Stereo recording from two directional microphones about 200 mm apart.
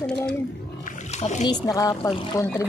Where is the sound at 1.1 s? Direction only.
35° left (ahead or behind).